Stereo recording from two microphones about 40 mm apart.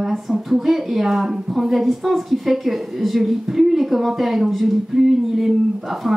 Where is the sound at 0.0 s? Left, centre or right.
Centre.